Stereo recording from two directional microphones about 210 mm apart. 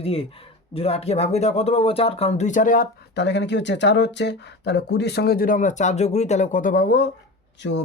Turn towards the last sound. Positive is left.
turn(degrees=55)  # may be behind; listen again after turning